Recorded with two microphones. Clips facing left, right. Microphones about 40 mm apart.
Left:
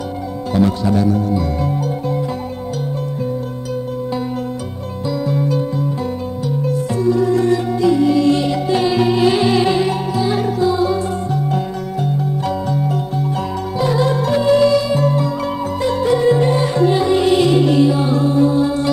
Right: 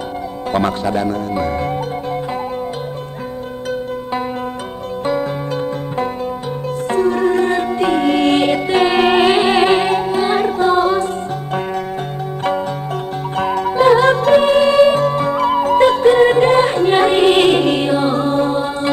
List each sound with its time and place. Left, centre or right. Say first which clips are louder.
0.5 s speech: left 1 dB; right
1.1 s speech: even; right
5.0 s music: even; right
18.6 s mantra: left 3 dB; right